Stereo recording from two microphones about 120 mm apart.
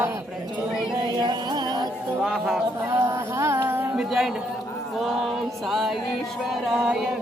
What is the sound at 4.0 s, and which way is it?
Speech, 5° right (ahead or behind).